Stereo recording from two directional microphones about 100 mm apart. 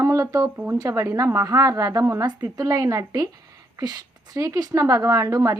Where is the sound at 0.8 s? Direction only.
35° right (ahead or behind).